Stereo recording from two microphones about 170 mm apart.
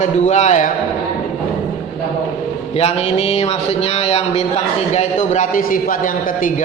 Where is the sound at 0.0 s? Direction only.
40° left (ahead or behind).